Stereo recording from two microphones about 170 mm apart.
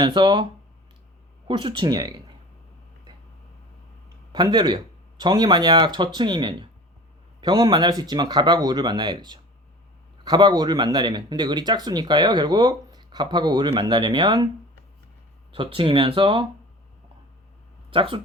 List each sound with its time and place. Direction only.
0.0 s speech: 30° right (ahead or behind)
1.5 s speech: 30° right (ahead or behind)
4.3 s speech: 25° right (ahead or behind)
15.5 s speech: 30° right (ahead or behind)
17.9 s speech: 30° right (ahead or behind)